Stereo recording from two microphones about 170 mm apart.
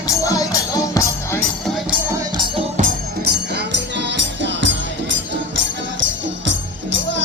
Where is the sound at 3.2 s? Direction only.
85° right.